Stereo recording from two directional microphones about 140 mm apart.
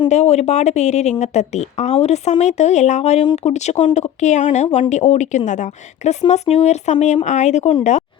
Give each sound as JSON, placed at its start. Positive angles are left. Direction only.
{"t": 0.1, "sound": "speech", "side_deg": 50}